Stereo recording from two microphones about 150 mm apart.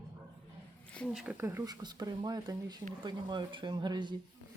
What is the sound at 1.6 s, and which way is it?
Speech, 25° right (ahead or behind).